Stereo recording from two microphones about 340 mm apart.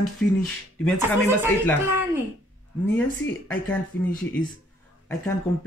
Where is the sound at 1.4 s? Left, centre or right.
Centre.